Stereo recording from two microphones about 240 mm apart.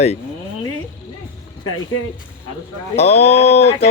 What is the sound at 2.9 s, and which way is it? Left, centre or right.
Speech, left.